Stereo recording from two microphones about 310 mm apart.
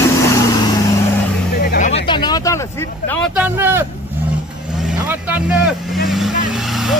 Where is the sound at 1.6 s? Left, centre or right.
Left.